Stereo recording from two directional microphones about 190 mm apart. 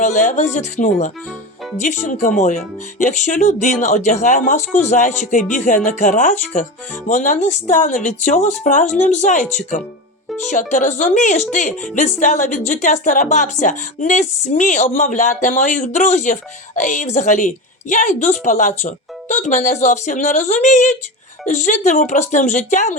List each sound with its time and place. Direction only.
0.0 s speech: 40° left (ahead or behind)